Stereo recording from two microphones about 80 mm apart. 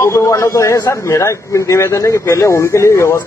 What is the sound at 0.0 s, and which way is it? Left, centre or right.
A man's voice, left.